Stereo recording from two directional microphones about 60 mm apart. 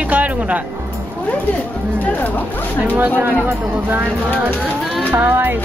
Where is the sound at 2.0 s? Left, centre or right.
Left.